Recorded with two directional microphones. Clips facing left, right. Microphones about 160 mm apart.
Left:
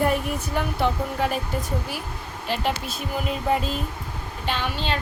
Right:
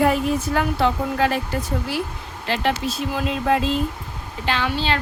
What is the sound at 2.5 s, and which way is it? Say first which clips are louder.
Speech: right 4 dB; 90° right.